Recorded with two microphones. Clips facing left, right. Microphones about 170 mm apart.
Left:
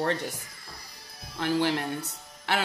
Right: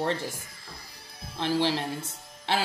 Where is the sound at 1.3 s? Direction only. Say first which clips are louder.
Even; 25° right (ahead or behind).